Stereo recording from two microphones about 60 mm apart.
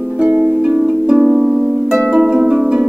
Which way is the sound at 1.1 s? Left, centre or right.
Right.